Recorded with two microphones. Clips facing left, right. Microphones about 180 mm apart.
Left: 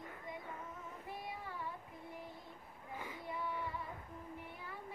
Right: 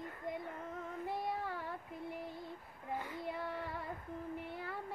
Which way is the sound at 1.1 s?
75° right (ahead or behind).